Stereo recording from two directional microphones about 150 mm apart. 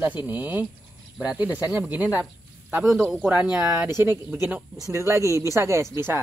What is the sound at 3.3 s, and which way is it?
Speech, 10° right (ahead or behind).